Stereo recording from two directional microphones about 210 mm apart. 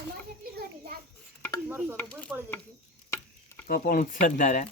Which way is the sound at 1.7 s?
10° right (ahead or behind).